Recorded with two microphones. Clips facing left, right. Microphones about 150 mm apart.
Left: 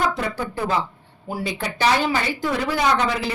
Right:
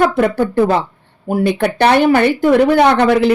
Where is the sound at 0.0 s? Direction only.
60° right (ahead or behind).